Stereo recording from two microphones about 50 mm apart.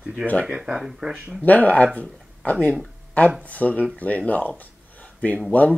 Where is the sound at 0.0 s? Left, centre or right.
Centre.